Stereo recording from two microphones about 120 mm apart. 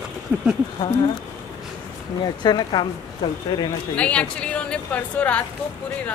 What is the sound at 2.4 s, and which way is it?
Speech, 40° left (ahead or behind).